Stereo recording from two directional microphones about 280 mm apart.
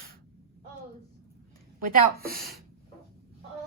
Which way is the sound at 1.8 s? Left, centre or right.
Right.